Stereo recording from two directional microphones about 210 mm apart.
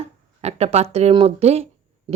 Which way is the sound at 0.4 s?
30° right (ahead or behind).